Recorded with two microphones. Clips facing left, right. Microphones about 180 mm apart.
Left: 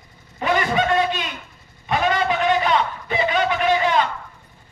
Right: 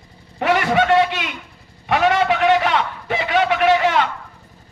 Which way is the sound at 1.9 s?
70° right (ahead or behind).